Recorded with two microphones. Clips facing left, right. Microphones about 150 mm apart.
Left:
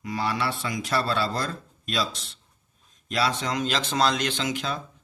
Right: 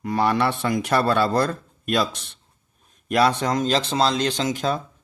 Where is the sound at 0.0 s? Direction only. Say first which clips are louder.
Right 7 dB; 55° right (ahead or behind); by 4.4 s 35° right (ahead or behind).